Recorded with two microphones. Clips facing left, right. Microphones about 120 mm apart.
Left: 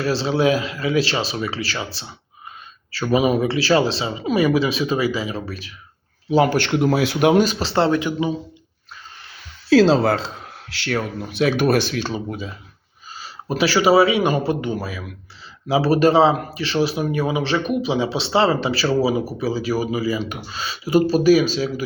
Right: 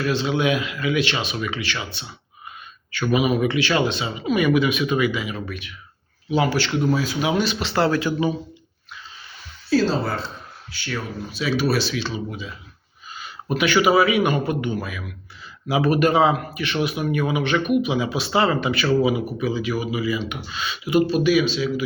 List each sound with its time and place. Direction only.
0.0 s speech: 35° left (ahead or behind)
6.3 s speech: 45° left (ahead or behind); by 8.3 s 20° left (ahead or behind)
9.6 s a man's voice: 90° left; by 21.8 s 40° left (ahead or behind)